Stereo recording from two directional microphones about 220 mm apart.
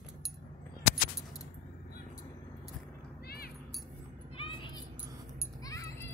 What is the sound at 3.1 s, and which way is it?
Cat, 45° left (ahead or behind).